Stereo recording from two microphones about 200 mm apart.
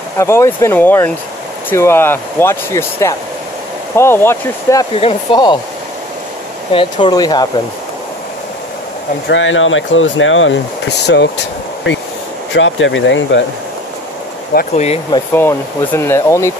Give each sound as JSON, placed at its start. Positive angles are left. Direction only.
{"t": 0.2, "sound": "speech", "side_deg": 15}
{"t": 4.9, "sound": "speech", "side_deg": 25}
{"t": 6.7, "sound": "speech", "side_deg": 25}
{"t": 9.3, "sound": "speech", "side_deg": 75}
{"t": 11.1, "sound": "speech", "side_deg": 60}
{"t": 14.5, "sound": "speech", "side_deg": 50}
{"t": 15.1, "sound": "speech", "side_deg": 10}